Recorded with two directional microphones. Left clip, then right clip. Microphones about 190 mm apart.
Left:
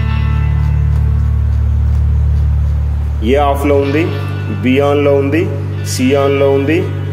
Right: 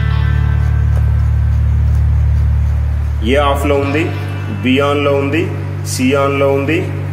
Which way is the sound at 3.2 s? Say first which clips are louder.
Left 1 dB; 25° left (ahead or behind).